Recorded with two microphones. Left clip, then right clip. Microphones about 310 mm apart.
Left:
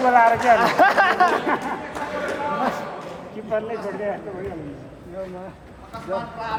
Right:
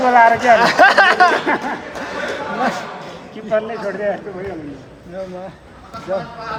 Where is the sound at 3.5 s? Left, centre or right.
Right.